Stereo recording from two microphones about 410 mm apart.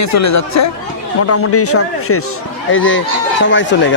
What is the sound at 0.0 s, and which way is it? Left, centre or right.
Speech, left.